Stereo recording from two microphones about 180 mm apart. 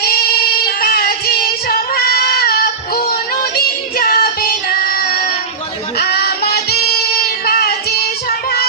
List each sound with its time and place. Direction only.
0.8 s child singing: 55° left (ahead or behind)